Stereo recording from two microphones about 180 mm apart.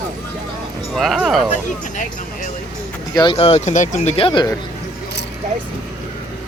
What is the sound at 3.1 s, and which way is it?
Speech, 30° left (ahead or behind).